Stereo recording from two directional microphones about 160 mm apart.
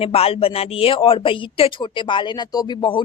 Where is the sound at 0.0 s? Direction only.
40° left (ahead or behind).